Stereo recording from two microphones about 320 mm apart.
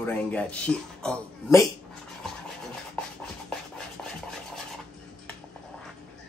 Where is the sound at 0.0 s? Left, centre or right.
Centre.